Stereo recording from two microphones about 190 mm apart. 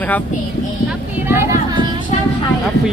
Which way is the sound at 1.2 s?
15° right (ahead or behind).